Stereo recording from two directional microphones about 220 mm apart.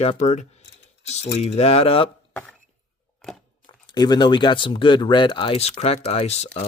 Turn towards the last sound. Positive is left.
turn(degrees=30)  # may be behind; listen again after turning